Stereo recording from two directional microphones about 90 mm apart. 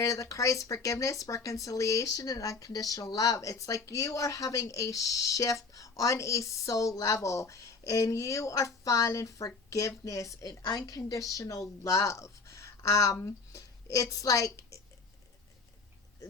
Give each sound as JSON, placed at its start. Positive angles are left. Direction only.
{"t": 0.0, "sound": "a woman's voice", "side_deg": 35}